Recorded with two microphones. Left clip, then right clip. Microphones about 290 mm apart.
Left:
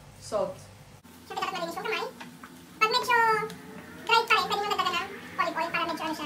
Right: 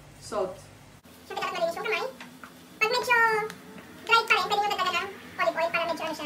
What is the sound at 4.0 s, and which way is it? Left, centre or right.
Gargling, centre.